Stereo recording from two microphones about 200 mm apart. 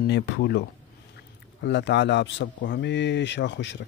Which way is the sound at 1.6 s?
60° left (ahead or behind).